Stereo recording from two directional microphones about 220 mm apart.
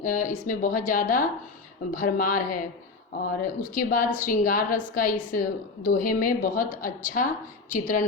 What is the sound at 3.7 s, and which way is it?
A woman's voice, 40° left (ahead or behind).